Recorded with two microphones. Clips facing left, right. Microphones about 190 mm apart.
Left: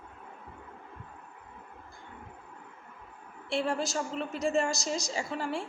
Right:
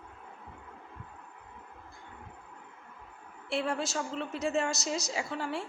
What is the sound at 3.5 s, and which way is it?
A woman's voice, centre (ahead or behind).